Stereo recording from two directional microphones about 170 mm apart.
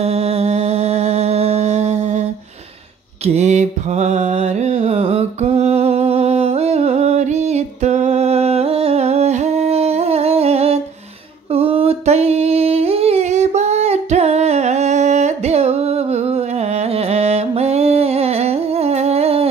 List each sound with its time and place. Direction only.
0.0 s mantra: 40° right (ahead or behind)
3.3 s music: 40° right (ahead or behind)
11.5 s singing: 35° right (ahead or behind)